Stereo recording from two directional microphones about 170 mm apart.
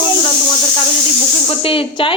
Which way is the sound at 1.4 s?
35° left (ahead or behind).